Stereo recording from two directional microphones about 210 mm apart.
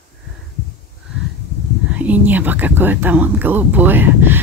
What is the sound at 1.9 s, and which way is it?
Speech, 5° right (ahead or behind).